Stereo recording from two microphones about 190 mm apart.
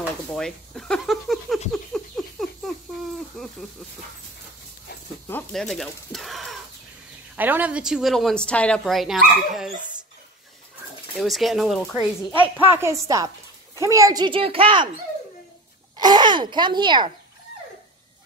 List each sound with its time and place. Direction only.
0.3 s a woman's voice: 5° left (ahead or behind)
1.7 s a sound: centre (ahead or behind)
3.4 s a woman's voice: 5° left (ahead or behind)
5.3 s a woman's voice: centre (ahead or behind)
11.1 s a woman's voice: centre (ahead or behind)
12.4 s a woman's voice: 10° right (ahead or behind); by 14.9 s 30° right (ahead or behind)
16.0 s speech: 20° right (ahead or behind)